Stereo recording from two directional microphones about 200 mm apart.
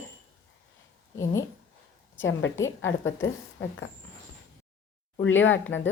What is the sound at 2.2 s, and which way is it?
Speech, 70° left (ahead or behind).